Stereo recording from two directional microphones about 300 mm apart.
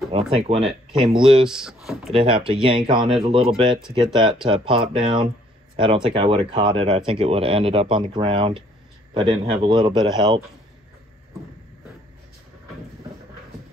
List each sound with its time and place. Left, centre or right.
0.1 s speech: centre
1.5 s speech: centre
2.1 s speech: centre